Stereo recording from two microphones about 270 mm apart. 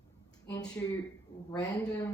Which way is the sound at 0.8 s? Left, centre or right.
Centre.